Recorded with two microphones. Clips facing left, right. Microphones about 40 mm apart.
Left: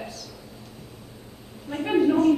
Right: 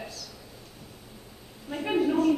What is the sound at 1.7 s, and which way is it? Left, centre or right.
Speech, centre.